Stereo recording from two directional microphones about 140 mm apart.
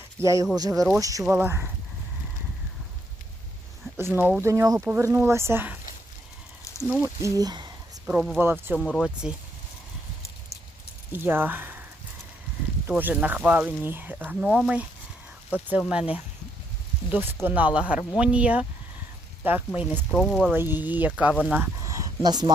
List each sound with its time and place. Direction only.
0.2 s speech: 20° right (ahead or behind)
3.9 s speech: 15° right (ahead or behind)
6.7 s a sound: 25° left (ahead or behind)
7.2 s speech: 25° right (ahead or behind)
8.0 s speech: 5° right (ahead or behind)
8.8 s speech: centre (ahead or behind)
11.1 s speech: 15° right (ahead or behind)
12.9 s speech: 10° right (ahead or behind)
19.9 s speech: 5° left (ahead or behind)
20.5 s speech: 15° right (ahead or behind)
21.8 s a sound: 25° right (ahead or behind)